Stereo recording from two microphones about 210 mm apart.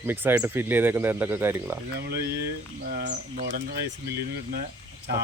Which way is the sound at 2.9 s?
40° right (ahead or behind).